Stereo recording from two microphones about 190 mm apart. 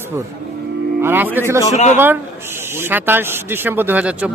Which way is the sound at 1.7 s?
40° left (ahead or behind).